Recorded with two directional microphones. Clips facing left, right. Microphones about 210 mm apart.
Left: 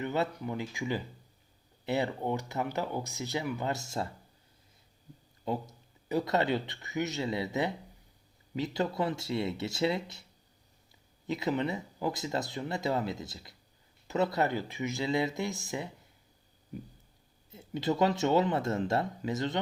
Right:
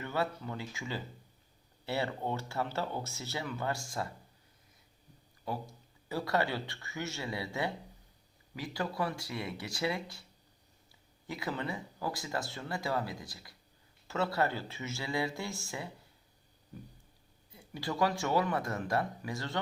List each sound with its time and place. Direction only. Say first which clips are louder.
0.0 s speech: left 3 dB; 20° left (ahead or behind)
5.5 s speech: left 5 dB; 20° left (ahead or behind)
11.3 s speech: left 6 dB; 20° left (ahead or behind)
17.5 s speech: left 7 dB; 20° left (ahead or behind)